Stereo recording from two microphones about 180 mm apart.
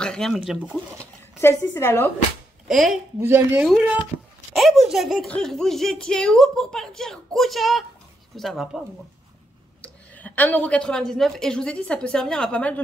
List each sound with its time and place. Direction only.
0.0 s speech: 5° left (ahead or behind)
1.4 s a woman's voice: 15° left (ahead or behind)
2.7 s speech: centre (ahead or behind)
3.2 s speech: 10° right (ahead or behind); by 12.8 s 5° left (ahead or behind)